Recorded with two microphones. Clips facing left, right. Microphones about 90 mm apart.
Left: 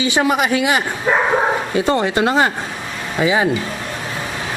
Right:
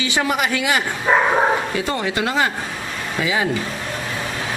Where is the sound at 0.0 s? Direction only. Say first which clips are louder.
Left 4 dB; 25° left (ahead or behind).